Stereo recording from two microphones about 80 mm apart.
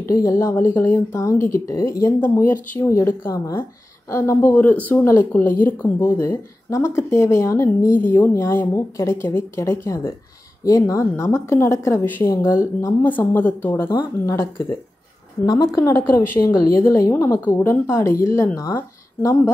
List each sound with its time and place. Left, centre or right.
0.1 s a woman's voice: left
1.2 s a woman's voice: left
2.1 s a woman's voice: left
4.5 s a woman's voice: left
6.1 s a woman's voice: left
8.0 s a woman's voice: left
13.0 s a woman's voice: left
14.2 s a woman's voice: left
15.4 s a woman's voice: left
16.0 s a woman's voice: left